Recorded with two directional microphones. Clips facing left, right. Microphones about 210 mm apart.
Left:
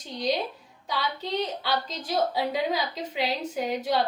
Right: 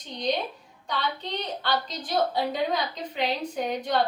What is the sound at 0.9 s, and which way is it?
Speech, 5° left (ahead or behind).